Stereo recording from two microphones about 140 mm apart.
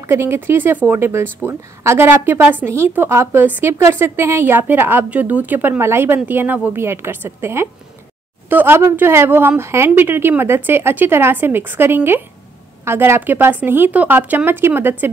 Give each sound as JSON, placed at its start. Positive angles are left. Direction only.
{"t": 0.1, "sound": "a woman's voice", "side_deg": -15}